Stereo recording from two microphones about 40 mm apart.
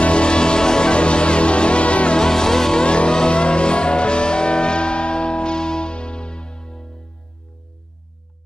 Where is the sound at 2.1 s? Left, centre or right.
Centre.